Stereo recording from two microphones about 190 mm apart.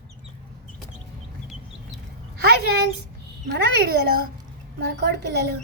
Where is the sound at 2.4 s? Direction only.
60° right (ahead or behind).